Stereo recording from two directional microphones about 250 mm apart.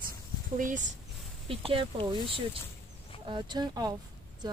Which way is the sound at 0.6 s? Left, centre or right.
Right.